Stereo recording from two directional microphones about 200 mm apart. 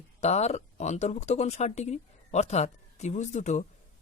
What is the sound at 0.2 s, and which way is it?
Speech, 35° left (ahead or behind).